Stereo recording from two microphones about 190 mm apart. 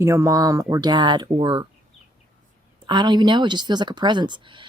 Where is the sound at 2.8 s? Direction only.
25° right (ahead or behind).